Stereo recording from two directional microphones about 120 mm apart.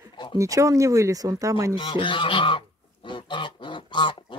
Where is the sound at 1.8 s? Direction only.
40° left (ahead or behind).